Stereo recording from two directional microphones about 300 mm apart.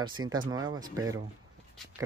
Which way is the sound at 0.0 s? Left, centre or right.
Centre.